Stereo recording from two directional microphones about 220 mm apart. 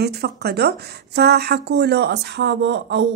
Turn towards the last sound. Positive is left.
turn(degrees=-50)  # may be behind; listen again after turning